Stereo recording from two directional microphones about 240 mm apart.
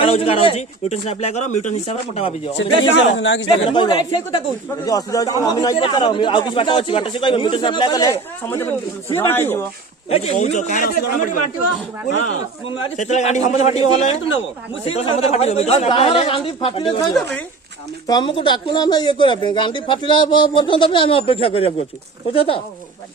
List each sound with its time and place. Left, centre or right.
0.0 s a man's voice: left
2.6 s speech: left
3.7 s a man's voice: centre
10.1 s speech: left
12.6 s a man's voice: left
18.1 s a man's voice: left